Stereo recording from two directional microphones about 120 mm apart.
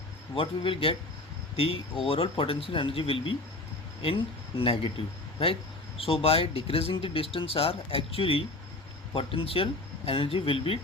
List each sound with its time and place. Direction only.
0.3 s speech: 50° left (ahead or behind)